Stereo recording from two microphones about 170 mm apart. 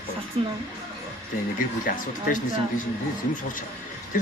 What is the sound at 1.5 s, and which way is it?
Speech, 50° left (ahead or behind).